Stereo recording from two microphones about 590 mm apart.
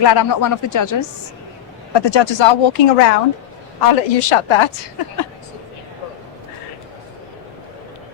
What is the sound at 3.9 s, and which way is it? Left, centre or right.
Speech, left.